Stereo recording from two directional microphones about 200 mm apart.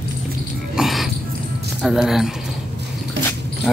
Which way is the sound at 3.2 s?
60° right (ahead or behind).